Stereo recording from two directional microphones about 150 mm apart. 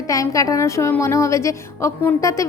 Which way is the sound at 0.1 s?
20° left (ahead or behind).